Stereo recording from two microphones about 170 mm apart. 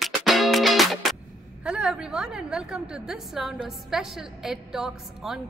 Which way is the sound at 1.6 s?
5° right (ahead or behind).